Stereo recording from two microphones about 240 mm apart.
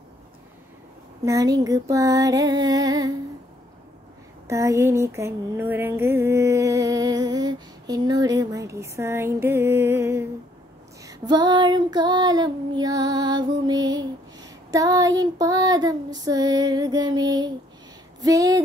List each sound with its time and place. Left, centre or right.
1.2 s female singing: centre
4.5 s a sound: centre
11.0 s female singing: centre